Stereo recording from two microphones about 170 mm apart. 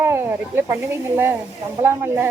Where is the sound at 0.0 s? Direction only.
15° right (ahead or behind).